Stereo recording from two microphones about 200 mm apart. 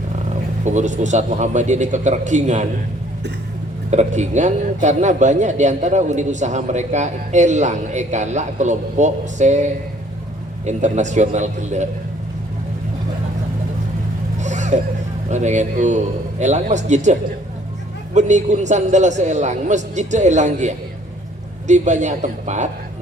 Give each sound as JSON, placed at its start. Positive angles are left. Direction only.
{"t": 0.6, "sound": "a man's voice", "side_deg": -35}
{"t": 3.9, "sound": "a man's voice", "side_deg": -35}
{"t": 10.7, "sound": "a man's voice", "side_deg": -35}
{"t": 14.4, "sound": "vehicle", "side_deg": -35}
{"t": 15.3, "sound": "a man's voice", "side_deg": -35}